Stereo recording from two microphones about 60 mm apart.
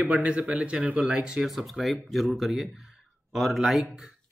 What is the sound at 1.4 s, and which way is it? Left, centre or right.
Speech, centre.